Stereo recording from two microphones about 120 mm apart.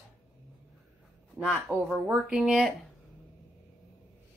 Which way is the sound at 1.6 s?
Centre (ahead or behind).